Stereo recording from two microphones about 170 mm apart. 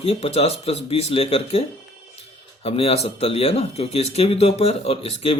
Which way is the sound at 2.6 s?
35° left (ahead or behind).